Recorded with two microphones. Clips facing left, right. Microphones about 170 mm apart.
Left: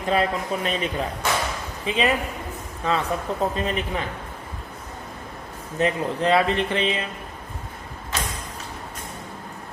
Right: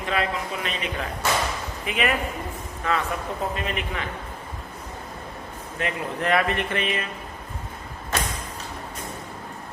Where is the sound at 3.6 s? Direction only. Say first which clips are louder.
Left 4 dB; 35° left (ahead or behind).